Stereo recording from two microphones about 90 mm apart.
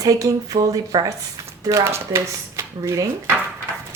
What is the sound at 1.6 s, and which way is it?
Speech, 35° right (ahead or behind).